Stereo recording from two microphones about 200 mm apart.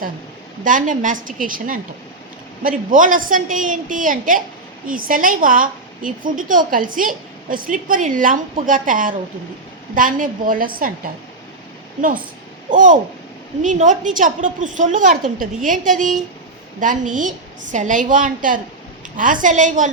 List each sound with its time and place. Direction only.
0.6 s a woman's voice: 40° right (ahead or behind)
12.7 s a woman's voice: 40° right (ahead or behind)